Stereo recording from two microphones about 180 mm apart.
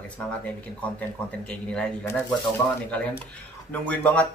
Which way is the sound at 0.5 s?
10° left (ahead or behind).